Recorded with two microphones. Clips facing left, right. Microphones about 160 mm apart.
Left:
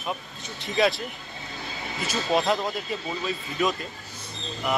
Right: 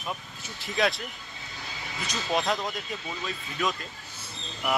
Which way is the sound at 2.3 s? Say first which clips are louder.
Left 4 dB; 35° left (ahead or behind).